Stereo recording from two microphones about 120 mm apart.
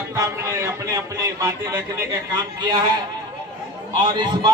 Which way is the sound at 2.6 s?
40° right (ahead or behind).